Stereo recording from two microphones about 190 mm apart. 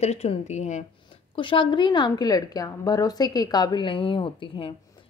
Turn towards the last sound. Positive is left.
turn(degrees=25)  # may be behind; listen again after turning